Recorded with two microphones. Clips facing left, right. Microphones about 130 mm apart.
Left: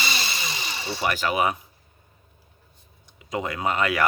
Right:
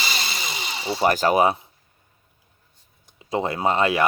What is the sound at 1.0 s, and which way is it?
Speech, 40° right (ahead or behind).